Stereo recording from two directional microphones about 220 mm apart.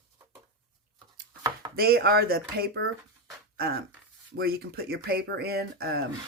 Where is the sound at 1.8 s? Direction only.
45° right (ahead or behind).